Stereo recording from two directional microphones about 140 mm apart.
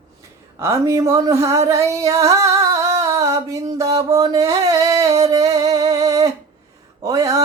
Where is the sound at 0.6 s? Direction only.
20° right (ahead or behind).